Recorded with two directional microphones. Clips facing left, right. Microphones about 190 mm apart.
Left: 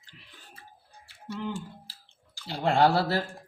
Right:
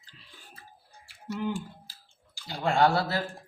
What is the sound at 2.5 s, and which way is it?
Speech, 35° left (ahead or behind).